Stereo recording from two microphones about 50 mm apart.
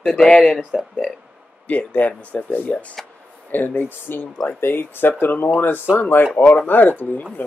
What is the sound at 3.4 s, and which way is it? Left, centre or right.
Speech, left.